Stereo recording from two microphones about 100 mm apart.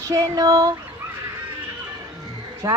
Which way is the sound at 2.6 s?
30° right (ahead or behind).